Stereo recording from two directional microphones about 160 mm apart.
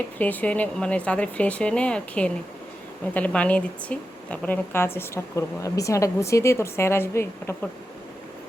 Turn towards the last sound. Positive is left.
turn(degrees=15)  # may be behind; listen again after turning